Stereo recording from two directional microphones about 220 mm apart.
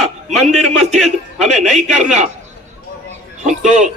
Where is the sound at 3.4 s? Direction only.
35° right (ahead or behind).